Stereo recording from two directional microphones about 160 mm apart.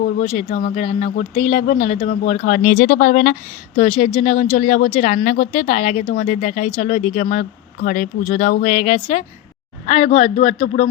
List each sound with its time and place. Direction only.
0.2 s speech: 40° left (ahead or behind); by 3.3 s 60° left (ahead or behind)
3.8 s speech: 40° left (ahead or behind)
7.8 s speech: 60° left (ahead or behind); by 10.7 s 35° left (ahead or behind)